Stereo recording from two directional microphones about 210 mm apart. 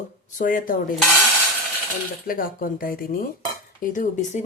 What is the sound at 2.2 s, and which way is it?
Speech, 45° left (ahead or behind).